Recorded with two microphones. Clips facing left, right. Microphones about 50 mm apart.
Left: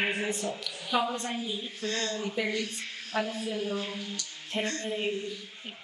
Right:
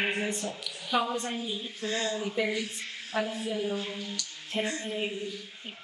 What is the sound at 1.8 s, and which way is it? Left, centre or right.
Speech, centre.